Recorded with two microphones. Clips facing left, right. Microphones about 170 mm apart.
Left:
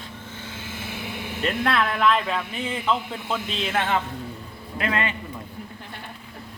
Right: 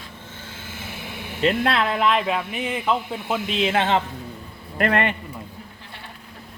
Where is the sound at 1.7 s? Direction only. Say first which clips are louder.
Right 1 dB; 25° right (ahead or behind).